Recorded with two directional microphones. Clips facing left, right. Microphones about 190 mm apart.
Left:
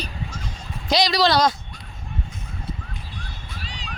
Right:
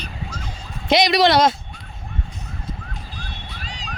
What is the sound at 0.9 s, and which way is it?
Speech, 20° right (ahead or behind).